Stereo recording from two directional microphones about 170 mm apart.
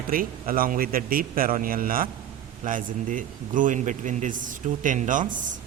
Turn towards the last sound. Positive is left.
turn(degrees=-50)  # may be behind; listen again after turning